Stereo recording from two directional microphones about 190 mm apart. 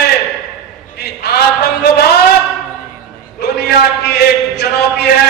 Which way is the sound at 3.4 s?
60° left (ahead or behind).